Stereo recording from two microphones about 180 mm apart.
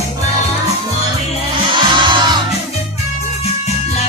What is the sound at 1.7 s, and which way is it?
Music, 25° right (ahead or behind).